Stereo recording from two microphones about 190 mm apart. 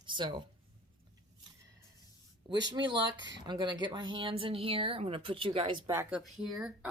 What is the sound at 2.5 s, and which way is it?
Speech, 20° right (ahead or behind).